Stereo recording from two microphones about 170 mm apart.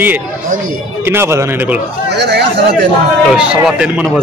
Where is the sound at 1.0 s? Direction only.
15° right (ahead or behind).